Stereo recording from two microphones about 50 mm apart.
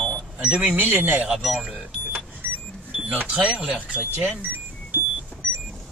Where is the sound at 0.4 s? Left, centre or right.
Right.